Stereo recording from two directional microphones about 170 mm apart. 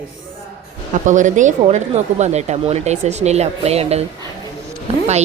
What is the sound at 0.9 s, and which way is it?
A woman's voice, 50° right (ahead or behind).